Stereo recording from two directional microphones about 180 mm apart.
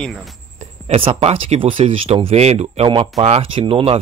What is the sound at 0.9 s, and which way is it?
Speech, 30° right (ahead or behind).